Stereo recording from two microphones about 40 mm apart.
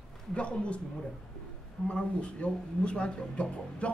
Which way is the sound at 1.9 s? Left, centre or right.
Left.